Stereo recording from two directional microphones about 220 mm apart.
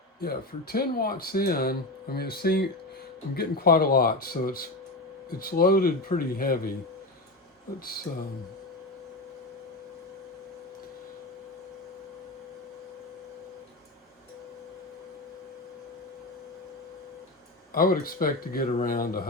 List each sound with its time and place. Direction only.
0.2 s speech: 45° left (ahead or behind)
17.7 s speech: 40° left (ahead or behind)